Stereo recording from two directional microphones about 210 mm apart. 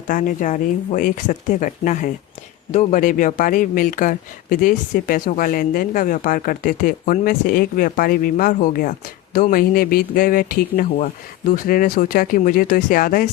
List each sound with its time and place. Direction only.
0.1 s speech: 40° left (ahead or behind)